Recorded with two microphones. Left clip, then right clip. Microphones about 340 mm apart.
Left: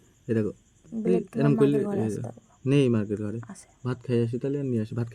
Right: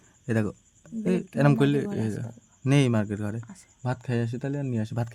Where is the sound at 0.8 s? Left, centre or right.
Right.